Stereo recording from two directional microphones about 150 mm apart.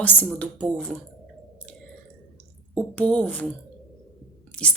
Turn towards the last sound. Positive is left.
turn(degrees=10)  # may be behind; listen again after turning